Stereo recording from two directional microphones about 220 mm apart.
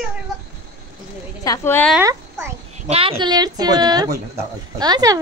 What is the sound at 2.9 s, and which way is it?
A woman's voice, 25° right (ahead or behind).